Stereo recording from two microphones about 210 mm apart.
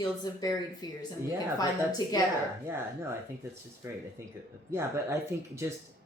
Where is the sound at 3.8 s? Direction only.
15° right (ahead or behind).